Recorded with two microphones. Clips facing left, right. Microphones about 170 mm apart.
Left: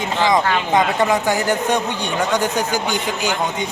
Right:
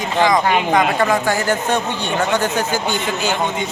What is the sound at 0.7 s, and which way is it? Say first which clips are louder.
Speech: right 1 dB; 20° left (ahead or behind).